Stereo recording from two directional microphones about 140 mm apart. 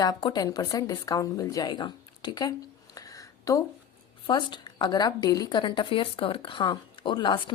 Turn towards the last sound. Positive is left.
turn(degrees=35)  # may be behind; listen again after turning